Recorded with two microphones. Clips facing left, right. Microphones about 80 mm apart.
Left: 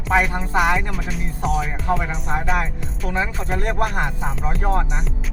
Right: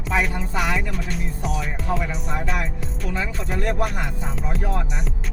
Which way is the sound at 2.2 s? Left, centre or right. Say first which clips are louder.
Left 4 dB; left.